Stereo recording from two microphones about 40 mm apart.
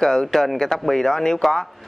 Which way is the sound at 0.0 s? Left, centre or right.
Centre.